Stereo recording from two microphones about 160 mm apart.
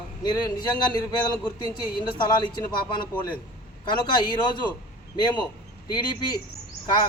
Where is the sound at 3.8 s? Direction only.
30° left (ahead or behind).